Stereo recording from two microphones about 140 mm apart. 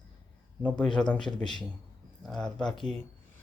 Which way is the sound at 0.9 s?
5° left (ahead or behind).